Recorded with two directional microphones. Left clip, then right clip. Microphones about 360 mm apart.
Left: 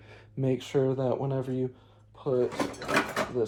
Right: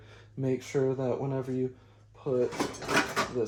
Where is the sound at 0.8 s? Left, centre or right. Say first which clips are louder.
Left 2 dB; left.